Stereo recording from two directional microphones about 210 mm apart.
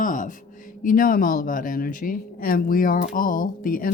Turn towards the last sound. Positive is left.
turn(degrees=45)  # may be behind; listen again after turning